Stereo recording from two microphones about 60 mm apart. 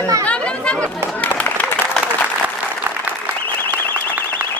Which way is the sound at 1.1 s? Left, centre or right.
Left.